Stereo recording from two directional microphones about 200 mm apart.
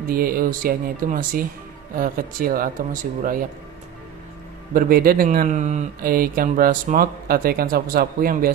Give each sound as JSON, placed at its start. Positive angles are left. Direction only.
{"t": 0.1, "sound": "speech", "side_deg": -45}
{"t": 4.7, "sound": "speech", "side_deg": -45}